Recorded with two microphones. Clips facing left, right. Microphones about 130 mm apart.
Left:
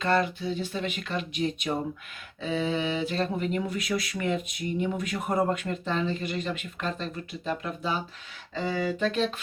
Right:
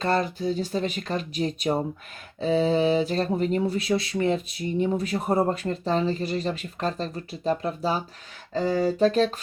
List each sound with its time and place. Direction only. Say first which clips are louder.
0.0 s speech: right 1 dB; 35° right (ahead or behind)